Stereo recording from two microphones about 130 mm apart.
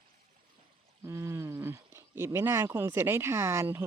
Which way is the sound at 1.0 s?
20° right (ahead or behind).